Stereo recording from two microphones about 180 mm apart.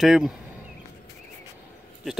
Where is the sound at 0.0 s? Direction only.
Centre (ahead or behind).